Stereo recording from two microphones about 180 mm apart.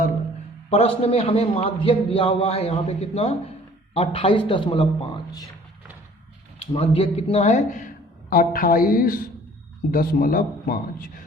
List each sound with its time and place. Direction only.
0.7 s a man's voice: 35° left (ahead or behind)
6.7 s a man's voice: 30° left (ahead or behind); by 11.1 s 50° left (ahead or behind)